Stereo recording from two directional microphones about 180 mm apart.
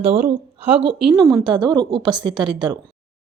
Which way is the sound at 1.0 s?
Centre (ahead or behind).